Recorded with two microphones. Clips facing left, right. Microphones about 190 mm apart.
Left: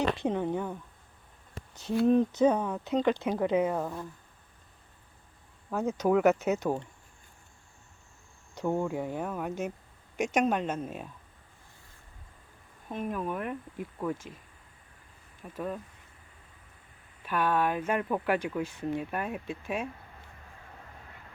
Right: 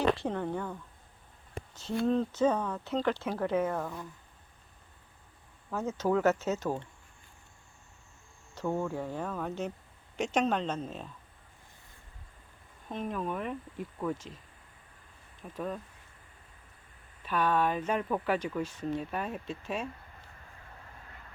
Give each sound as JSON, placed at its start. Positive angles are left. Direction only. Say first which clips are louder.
{"t": 0.2, "sound": "speech", "louder": "left 4 dB", "side_deg": 15}
{"t": 2.0, "sound": "speech", "louder": "left 4 dB", "side_deg": 15}
{"t": 5.7, "sound": "speech", "louder": "left 3 dB", "side_deg": 15}
{"t": 8.5, "sound": "speech", "louder": "left 3 dB", "side_deg": 15}
{"t": 12.9, "sound": "speech", "louder": "left 1 dB", "side_deg": 10}
{"t": 15.5, "sound": "speech", "louder": "left 1 dB", "side_deg": 5}
{"t": 17.2, "sound": "speech", "louder": "left 1 dB", "side_deg": 10}